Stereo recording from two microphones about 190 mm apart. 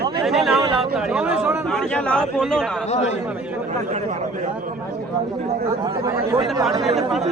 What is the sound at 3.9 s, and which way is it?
Speech, 40° right (ahead or behind).